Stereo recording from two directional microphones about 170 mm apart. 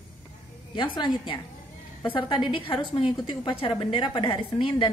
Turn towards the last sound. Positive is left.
turn(degrees=30)  # may be behind; listen again after turning